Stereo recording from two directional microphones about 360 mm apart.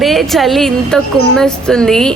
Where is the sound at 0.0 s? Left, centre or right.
Centre.